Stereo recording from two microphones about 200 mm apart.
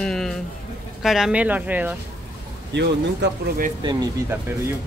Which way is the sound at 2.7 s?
55° right (ahead or behind).